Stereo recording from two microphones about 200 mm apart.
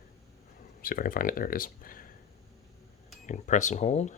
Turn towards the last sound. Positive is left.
turn(degrees=35)  # may be behind; listen again after turning